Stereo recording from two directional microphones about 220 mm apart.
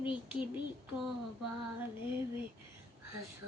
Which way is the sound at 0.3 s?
5° right (ahead or behind).